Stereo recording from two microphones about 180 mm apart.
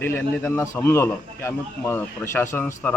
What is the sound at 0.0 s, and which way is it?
A man's voice, 10° left (ahead or behind).